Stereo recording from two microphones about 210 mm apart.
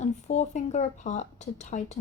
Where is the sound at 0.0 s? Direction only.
35° left (ahead or behind).